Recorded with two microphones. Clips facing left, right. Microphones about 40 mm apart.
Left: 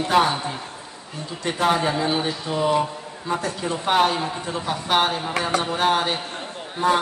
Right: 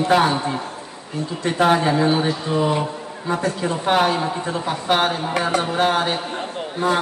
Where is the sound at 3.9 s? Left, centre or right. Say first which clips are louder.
Right 1 dB; centre.